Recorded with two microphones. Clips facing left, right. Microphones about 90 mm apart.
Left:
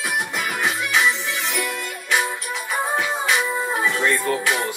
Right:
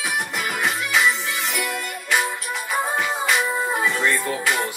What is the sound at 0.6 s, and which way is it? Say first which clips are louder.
Music: even; centre (ahead or behind).